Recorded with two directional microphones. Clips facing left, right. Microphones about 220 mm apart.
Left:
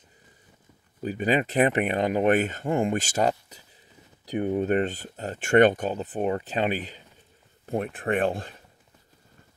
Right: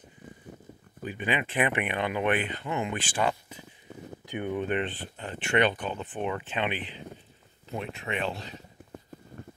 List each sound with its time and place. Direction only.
1.0 s speech: 40° left (ahead or behind)
7.6 s speech: 50° left (ahead or behind)